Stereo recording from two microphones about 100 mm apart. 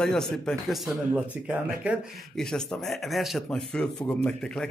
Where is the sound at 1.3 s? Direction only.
15° right (ahead or behind).